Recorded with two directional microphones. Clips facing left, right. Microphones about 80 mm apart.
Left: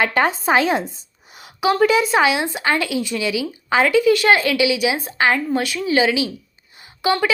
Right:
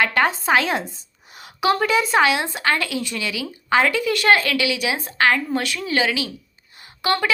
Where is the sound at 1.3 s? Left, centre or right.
Centre.